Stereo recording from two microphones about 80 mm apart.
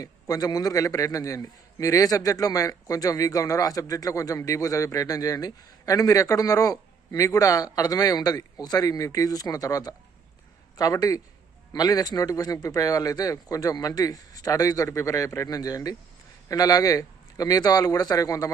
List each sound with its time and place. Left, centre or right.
0.0 s a man's voice: left